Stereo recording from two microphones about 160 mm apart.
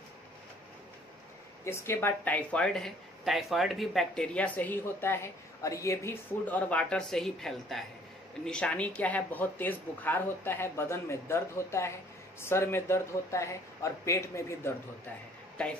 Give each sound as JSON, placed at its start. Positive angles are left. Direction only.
{"t": 1.6, "sound": "speech", "side_deg": 15}